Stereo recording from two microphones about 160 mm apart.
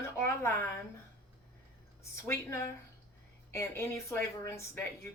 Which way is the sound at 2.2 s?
15° left (ahead or behind).